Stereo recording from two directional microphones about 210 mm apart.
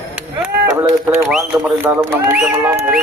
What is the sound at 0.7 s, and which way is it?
Speech, 10° right (ahead or behind).